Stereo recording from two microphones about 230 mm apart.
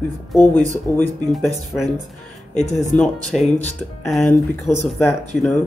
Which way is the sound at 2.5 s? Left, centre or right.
Left.